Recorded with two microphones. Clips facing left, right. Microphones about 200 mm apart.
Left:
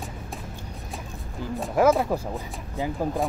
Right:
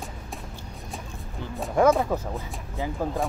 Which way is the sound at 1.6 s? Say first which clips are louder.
Even; 5° left (ahead or behind).